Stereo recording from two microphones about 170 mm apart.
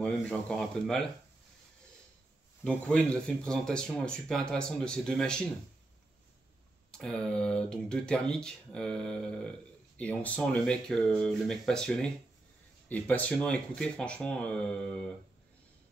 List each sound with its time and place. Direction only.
0.0 s speech: 5° left (ahead or behind)
2.6 s speech: 5° left (ahead or behind)
6.9 s speech: 5° left (ahead or behind)